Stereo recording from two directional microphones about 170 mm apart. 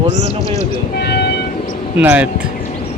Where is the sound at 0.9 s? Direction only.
70° left (ahead or behind).